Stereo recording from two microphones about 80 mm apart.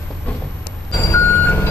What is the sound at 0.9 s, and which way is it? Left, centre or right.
Reversing beeps, left.